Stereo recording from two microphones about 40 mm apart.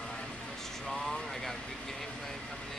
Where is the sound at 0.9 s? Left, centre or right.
Centre.